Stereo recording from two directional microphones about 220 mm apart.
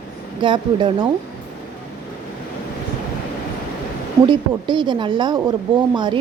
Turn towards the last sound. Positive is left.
turn(degrees=-20)  # may be behind; listen again after turning